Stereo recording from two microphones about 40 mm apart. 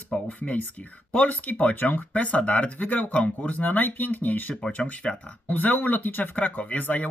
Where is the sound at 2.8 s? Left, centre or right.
Left.